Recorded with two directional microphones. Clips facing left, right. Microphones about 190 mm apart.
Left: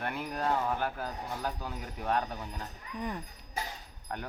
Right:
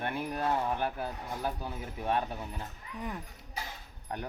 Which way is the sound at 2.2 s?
5° right (ahead or behind).